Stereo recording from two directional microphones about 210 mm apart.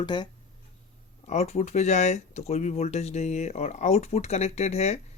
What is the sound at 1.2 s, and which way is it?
Speech, 30° left (ahead or behind).